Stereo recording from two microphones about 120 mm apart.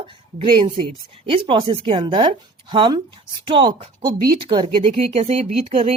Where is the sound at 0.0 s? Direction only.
50° right (ahead or behind).